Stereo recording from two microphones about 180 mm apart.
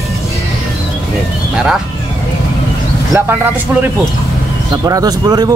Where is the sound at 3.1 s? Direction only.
10° right (ahead or behind).